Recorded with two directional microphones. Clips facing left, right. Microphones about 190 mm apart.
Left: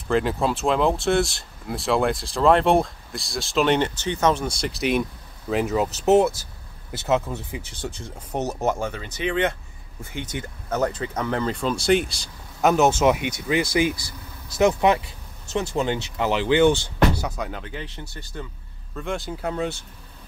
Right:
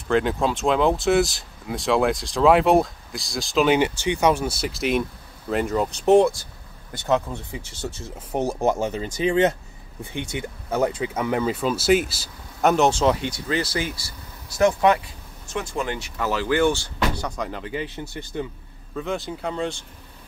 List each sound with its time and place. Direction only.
0.1 s speech: centre (ahead or behind); by 9.0 s 20° right (ahead or behind)
10.3 s speech: 10° right (ahead or behind); by 16.9 s 20° left (ahead or behind)
17.1 s speech: 5° left (ahead or behind)
18.0 s speech: 15° right (ahead or behind)
18.9 s speech: centre (ahead or behind)